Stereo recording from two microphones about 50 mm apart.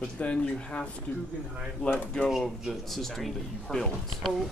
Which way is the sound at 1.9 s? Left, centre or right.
Centre.